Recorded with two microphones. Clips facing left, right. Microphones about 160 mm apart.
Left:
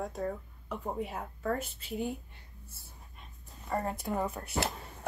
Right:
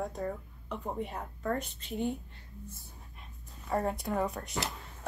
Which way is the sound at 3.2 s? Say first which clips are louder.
Left 1 dB; centre (ahead or behind).